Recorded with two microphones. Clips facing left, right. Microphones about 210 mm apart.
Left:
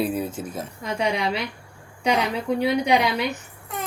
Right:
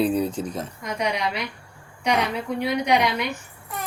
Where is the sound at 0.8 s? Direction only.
30° left (ahead or behind).